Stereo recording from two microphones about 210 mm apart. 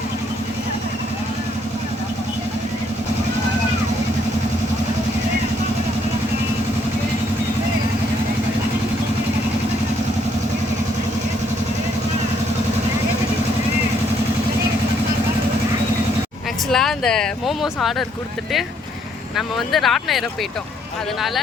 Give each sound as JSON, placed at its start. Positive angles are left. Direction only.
{"t": 16.7, "sound": "speech", "side_deg": 0}
{"t": 19.4, "sound": "speech", "side_deg": 0}